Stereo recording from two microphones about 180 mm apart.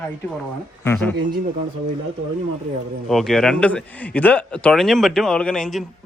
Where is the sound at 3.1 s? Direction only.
Centre (ahead or behind).